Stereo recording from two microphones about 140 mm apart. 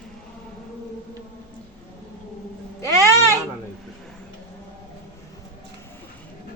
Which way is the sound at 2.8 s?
20° left (ahead or behind).